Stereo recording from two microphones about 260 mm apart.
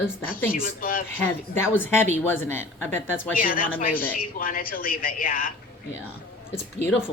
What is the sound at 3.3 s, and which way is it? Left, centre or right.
Speech, left.